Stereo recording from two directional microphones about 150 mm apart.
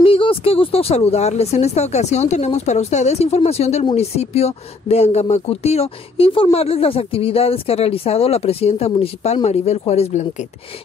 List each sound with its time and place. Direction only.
0.0 s speech: 40° left (ahead or behind)